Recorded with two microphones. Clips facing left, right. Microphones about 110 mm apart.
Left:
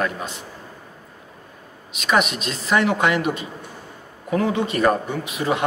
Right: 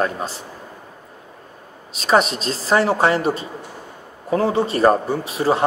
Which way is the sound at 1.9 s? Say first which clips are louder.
Right 3 dB; 35° right (ahead or behind).